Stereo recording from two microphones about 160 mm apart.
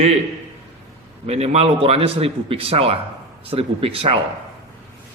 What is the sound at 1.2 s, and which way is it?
Speech, 40° right (ahead or behind).